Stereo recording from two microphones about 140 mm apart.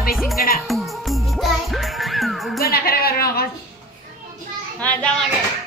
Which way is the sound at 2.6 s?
90° left.